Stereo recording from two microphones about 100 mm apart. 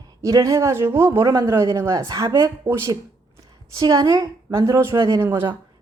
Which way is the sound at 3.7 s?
40° right (ahead or behind).